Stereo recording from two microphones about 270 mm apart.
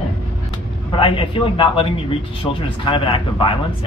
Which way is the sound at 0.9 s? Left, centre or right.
Centre.